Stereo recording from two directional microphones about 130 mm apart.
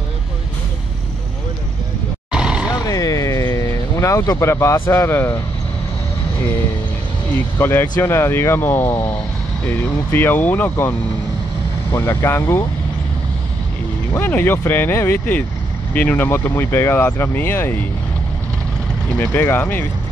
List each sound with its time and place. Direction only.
2.3 s vehicle: 5° right (ahead or behind)
2.7 s vehicle: 25° left (ahead or behind)
7.5 s speech: 20° left (ahead or behind)
14.1 s speech: 15° left (ahead or behind)
19.1 s speech: 15° left (ahead or behind)